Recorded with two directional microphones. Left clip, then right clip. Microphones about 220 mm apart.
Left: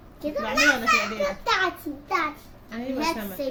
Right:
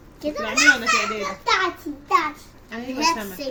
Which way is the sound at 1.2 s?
15° left (ahead or behind).